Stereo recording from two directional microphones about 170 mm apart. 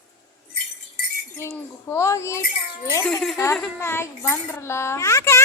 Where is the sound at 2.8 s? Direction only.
15° left (ahead or behind).